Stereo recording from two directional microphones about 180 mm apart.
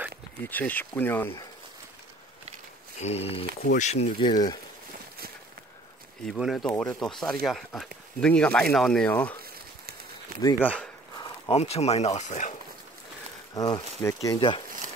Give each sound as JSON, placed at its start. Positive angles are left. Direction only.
{"t": 0.5, "sound": "speech", "side_deg": 10}
{"t": 3.0, "sound": "speech", "side_deg": 35}
{"t": 4.3, "sound": "speech", "side_deg": 20}
{"t": 6.2, "sound": "speech", "side_deg": 0}
{"t": 10.4, "sound": "speech", "side_deg": 10}
{"t": 11.1, "sound": "speech", "side_deg": 25}
{"t": 13.6, "sound": "speech", "side_deg": 20}